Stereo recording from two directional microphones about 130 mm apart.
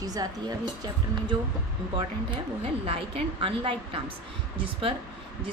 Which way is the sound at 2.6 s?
45° right (ahead or behind).